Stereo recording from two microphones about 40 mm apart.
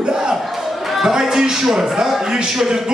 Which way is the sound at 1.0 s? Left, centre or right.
Centre.